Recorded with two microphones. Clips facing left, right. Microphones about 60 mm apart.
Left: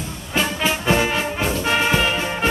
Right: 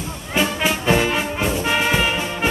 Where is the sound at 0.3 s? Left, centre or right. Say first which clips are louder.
Right 1 dB; centre.